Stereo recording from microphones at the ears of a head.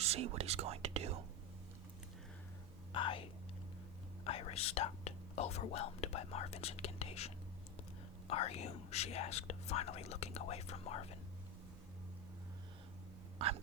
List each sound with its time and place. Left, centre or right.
0.0 s speech: right
2.9 s speech: left
8.3 s speech: left